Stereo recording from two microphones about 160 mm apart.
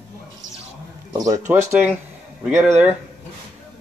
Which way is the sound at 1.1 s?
25° right (ahead or behind).